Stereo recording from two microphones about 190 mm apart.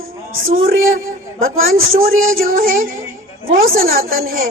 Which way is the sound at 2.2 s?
50° right (ahead or behind).